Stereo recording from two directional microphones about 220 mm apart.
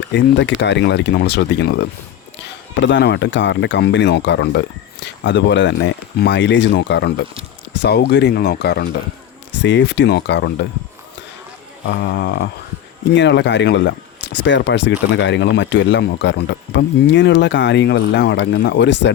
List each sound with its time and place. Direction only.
0.1 s speech: 55° left (ahead or behind)
2.8 s speech: 50° left (ahead or behind)
12.0 s speech: 50° left (ahead or behind)